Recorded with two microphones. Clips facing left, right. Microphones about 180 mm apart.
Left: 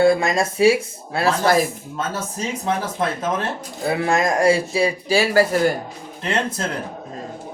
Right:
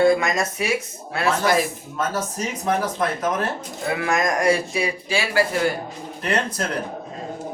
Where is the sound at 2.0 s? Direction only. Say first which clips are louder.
Right 1 dB; 30° left (ahead or behind).